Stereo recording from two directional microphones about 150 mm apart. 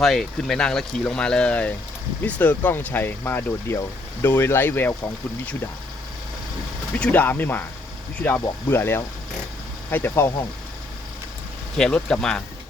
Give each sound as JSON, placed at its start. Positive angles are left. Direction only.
{"t": 0.0, "sound": "speech", "side_deg": 0}
{"t": 6.9, "sound": "speech", "side_deg": 10}
{"t": 11.8, "sound": "speech", "side_deg": 5}